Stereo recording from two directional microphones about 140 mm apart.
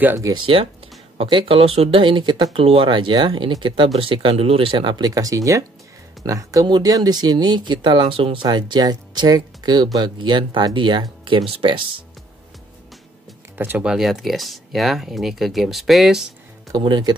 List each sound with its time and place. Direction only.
0.0 s speech: 15° right (ahead or behind)
0.3 s speech: 40° right (ahead or behind)
13.6 s speech: 10° right (ahead or behind)
16.7 s speech: 30° right (ahead or behind)